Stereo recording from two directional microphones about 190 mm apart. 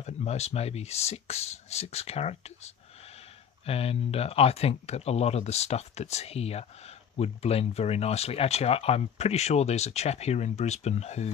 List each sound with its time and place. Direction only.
0.0 s speech: 35° left (ahead or behind)